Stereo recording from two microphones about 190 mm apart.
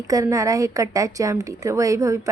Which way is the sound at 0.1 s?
15° right (ahead or behind).